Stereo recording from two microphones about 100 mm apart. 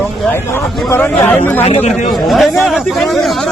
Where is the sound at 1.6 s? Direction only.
90° left.